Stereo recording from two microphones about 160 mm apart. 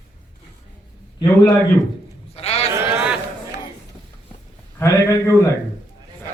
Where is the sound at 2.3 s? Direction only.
40° left (ahead or behind).